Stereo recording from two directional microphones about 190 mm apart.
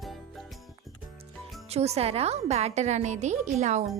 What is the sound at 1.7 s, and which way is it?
A woman's voice, 35° right (ahead or behind).